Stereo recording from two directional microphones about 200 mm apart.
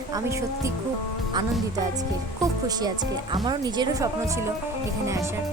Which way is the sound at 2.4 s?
20° right (ahead or behind).